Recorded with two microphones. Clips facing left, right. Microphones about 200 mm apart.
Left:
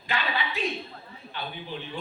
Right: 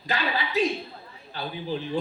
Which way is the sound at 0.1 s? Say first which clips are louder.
Right 3 dB; 40° right (ahead or behind).